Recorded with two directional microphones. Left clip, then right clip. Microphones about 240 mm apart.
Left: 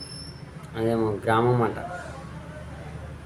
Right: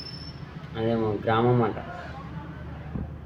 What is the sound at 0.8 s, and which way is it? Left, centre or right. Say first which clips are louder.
Speech: left 1 dB; centre.